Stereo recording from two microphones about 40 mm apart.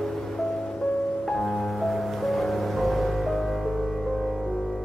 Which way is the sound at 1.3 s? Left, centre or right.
Centre.